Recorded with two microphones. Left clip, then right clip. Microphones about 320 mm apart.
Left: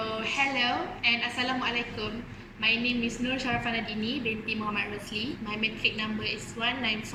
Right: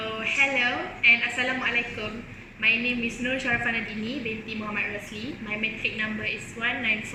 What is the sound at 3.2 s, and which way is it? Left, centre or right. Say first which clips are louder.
A woman's voice: right 5 dB; centre.